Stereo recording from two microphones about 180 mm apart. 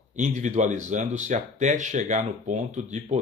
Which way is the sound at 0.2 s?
40° right (ahead or behind).